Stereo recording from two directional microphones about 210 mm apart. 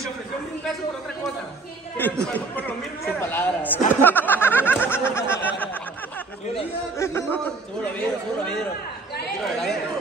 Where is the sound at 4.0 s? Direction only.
10° left (ahead or behind).